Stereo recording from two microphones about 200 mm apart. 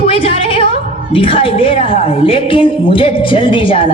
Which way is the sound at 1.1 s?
25° left (ahead or behind).